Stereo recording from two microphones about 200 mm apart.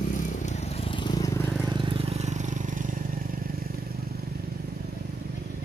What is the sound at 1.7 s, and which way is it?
Vehicle, 25° right (ahead or behind).